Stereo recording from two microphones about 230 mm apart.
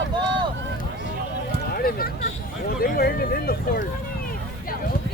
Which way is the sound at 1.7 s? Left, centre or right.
Left.